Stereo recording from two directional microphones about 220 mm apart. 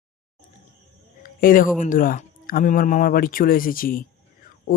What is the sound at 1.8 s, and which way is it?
Speech, 40° left (ahead or behind).